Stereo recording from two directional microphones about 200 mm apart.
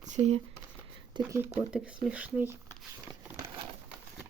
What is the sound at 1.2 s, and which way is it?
Speech, 15° right (ahead or behind).